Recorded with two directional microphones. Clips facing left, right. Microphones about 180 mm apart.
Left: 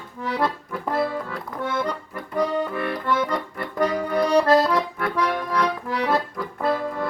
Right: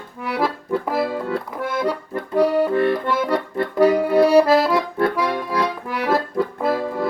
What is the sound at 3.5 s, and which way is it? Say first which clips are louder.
Accordion: right 8 dB; 25° right (ahead or behind).